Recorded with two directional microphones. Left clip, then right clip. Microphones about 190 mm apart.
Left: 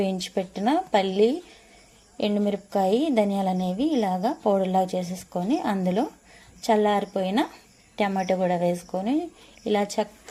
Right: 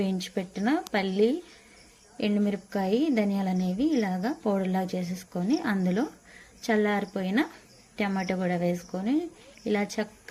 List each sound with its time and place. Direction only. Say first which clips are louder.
0.0 s a woman's voice: left 5 dB; 10° right (ahead or behind)